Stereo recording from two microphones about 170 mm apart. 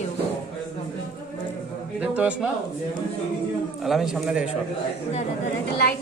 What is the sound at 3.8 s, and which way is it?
Speech, centre (ahead or behind).